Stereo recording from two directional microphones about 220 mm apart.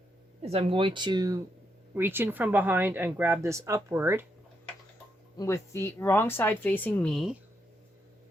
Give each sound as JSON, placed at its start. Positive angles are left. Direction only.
{"t": 0.4, "sound": "a woman's voice", "side_deg": -25}
{"t": 5.4, "sound": "speech", "side_deg": 10}